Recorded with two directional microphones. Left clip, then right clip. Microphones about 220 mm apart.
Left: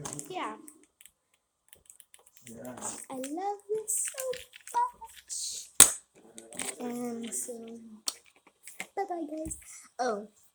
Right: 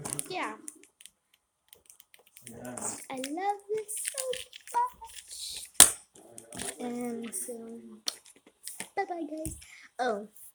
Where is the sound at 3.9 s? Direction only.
20° right (ahead or behind).